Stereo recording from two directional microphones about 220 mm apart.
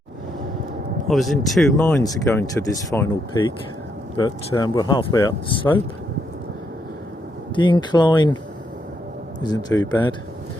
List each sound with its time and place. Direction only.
1.0 s speech: centre (ahead or behind); by 5.6 s 20° left (ahead or behind)
7.5 s speech: 20° left (ahead or behind)
9.4 s speech: 20° left (ahead or behind)